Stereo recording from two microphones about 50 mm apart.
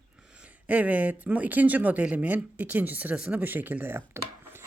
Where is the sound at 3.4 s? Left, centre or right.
Right.